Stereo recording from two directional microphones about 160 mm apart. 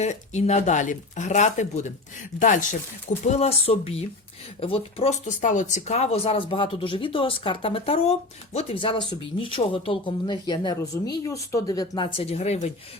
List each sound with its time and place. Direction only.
0.0 s speech: 45° left (ahead or behind)
5.4 s speech: 50° left (ahead or behind)